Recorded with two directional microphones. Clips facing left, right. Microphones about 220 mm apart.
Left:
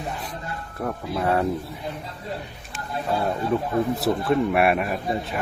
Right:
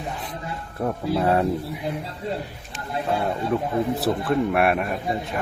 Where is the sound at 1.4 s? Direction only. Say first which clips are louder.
Right 2 dB; 15° right (ahead or behind).